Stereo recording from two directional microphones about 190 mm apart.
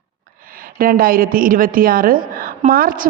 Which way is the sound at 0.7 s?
50° right (ahead or behind).